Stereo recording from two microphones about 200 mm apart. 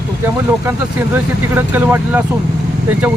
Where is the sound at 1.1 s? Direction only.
10° right (ahead or behind).